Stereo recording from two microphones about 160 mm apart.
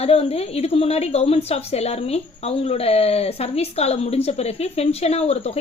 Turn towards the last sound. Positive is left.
turn(degrees=40)  # may be behind; listen again after turning